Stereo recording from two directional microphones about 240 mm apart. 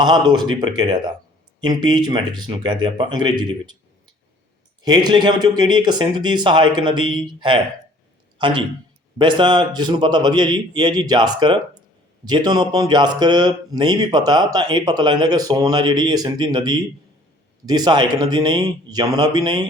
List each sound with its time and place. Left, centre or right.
0.0 s speech: centre
4.8 s a man's voice: centre